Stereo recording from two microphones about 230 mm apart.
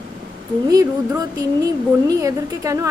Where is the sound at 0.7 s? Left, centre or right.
Centre.